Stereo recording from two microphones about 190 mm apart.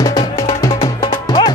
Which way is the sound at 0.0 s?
20° left (ahead or behind).